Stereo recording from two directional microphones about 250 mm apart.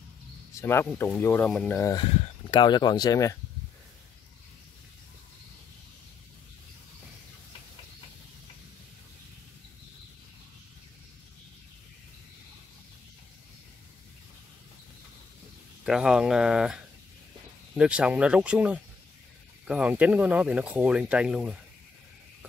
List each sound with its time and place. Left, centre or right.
0.6 s speech: centre
15.8 s speech: centre